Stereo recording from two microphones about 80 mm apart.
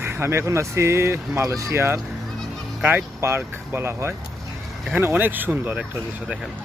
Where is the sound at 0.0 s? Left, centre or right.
Right.